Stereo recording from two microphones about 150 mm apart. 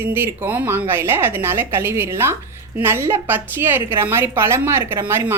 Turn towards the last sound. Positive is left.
turn(degrees=-15)  # may be behind; listen again after turning